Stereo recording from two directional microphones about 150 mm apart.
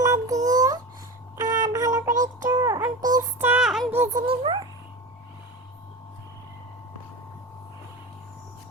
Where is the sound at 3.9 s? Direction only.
15° right (ahead or behind).